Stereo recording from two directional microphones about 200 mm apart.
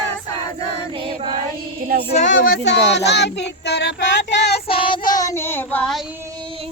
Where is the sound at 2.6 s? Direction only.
60° left (ahead or behind).